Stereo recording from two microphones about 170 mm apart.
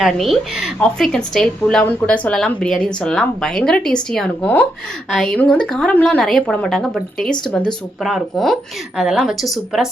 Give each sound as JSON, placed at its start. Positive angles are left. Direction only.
{"t": 0.0, "sound": "speech", "side_deg": 0}